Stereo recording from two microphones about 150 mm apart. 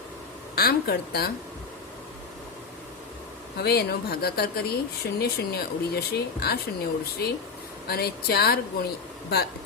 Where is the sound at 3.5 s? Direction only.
90° left.